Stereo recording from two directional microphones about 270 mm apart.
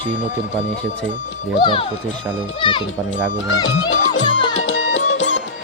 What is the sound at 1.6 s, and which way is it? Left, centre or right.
Speech, centre.